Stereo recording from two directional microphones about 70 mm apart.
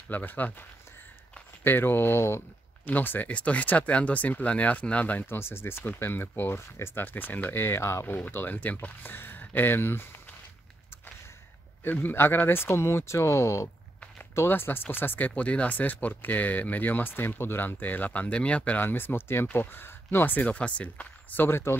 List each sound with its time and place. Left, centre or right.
0.1 s speech: left
2.9 s speech: left
5.2 s speech: left
11.8 s speech: left